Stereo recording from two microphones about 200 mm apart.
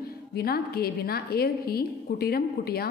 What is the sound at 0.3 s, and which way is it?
Speech, 50° left (ahead or behind).